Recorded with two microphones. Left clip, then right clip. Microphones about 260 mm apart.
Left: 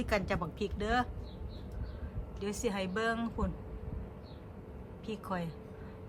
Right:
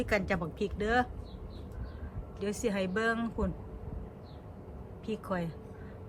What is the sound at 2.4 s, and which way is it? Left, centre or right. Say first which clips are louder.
Speech: right 3 dB; centre.